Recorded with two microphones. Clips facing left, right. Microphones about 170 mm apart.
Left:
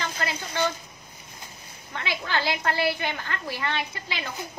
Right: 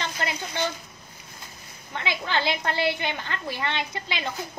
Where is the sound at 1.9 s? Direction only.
20° right (ahead or behind).